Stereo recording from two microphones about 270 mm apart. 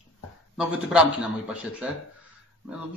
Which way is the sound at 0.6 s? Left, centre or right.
Centre.